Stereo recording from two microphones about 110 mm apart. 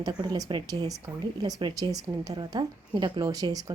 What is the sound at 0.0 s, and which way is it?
Speech, 35° right (ahead or behind).